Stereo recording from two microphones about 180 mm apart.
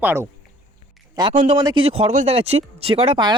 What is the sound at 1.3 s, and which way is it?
A man's voice, 35° right (ahead or behind).